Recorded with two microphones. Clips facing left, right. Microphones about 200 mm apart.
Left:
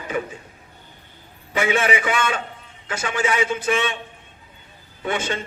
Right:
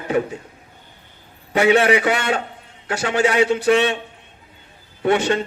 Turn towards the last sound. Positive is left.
turn(degrees=-65)  # may be behind; listen again after turning